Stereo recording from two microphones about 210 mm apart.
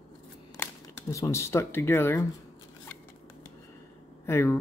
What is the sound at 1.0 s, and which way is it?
Speech, 15° left (ahead or behind).